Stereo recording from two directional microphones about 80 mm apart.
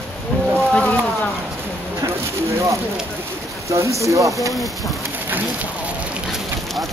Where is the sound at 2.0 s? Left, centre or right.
Right.